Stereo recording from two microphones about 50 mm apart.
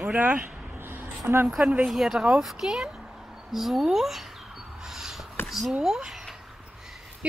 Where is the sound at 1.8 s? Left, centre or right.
Centre.